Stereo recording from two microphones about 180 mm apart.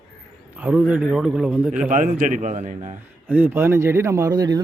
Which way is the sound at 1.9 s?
45° right (ahead or behind).